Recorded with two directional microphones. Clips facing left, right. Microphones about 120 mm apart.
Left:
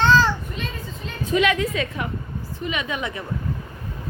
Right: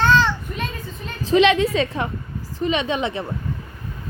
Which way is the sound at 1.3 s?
25° right (ahead or behind).